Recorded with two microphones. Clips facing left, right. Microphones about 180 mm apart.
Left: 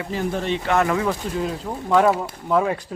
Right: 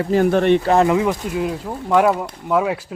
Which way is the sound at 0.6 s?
35° right (ahead or behind).